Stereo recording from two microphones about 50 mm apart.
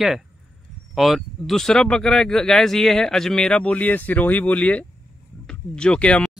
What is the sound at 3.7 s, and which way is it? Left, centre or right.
Speech, left.